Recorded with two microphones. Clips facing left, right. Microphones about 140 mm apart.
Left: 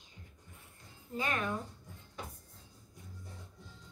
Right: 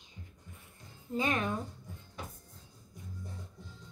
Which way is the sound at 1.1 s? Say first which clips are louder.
Right 4 dB; 20° right (ahead or behind).